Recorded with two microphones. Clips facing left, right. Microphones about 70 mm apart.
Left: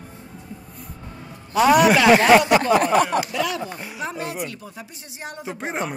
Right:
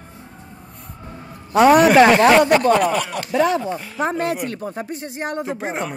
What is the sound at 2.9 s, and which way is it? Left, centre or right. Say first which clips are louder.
Speech: left 5 dB; left.